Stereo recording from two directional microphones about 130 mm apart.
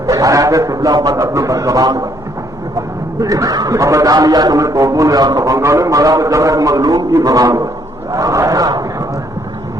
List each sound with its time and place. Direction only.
0.1 s a man's voice: 25° right (ahead or behind)
3.2 s a man's voice: 25° right (ahead or behind)
8.1 s a sound: 25° right (ahead or behind)